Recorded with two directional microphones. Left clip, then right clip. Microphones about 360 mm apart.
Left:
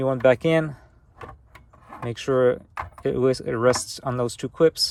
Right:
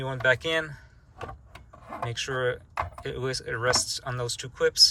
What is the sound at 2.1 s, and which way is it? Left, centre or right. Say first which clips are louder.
Speech: left 9 dB; centre.